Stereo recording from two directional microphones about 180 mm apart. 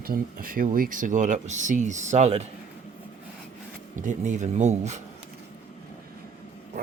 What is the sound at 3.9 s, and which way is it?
Speech, 45° right (ahead or behind).